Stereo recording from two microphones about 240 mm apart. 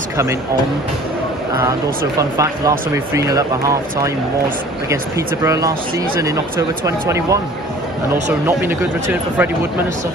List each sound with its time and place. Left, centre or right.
1.6 s speech: centre
8.5 s speech: centre